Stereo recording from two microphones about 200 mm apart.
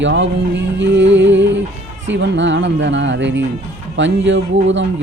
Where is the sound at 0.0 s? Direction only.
65° right (ahead or behind).